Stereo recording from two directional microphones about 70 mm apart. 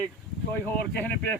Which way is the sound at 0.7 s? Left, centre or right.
Left.